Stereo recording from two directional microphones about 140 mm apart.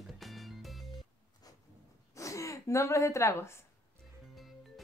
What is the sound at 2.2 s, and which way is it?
Speech, 20° left (ahead or behind).